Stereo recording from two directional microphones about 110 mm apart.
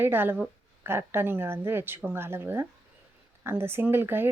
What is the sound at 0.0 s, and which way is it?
Speech, 20° right (ahead or behind).